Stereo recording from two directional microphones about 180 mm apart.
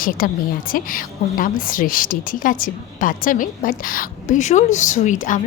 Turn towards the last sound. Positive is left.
turn(degrees=45)  # may be behind; listen again after turning